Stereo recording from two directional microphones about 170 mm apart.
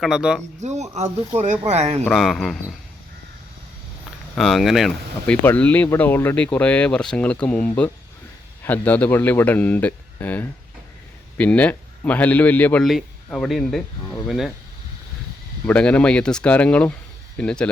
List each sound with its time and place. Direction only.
0.0 s speech: 5° right (ahead or behind)
0.6 s speech: 40° right (ahead or behind)
2.0 s speech: centre (ahead or behind)
4.4 s speech: centre (ahead or behind)
15.6 s speech: 5° left (ahead or behind)